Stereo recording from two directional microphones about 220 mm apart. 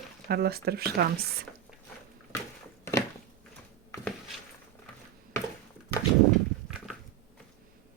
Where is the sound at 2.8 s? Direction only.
10° left (ahead or behind).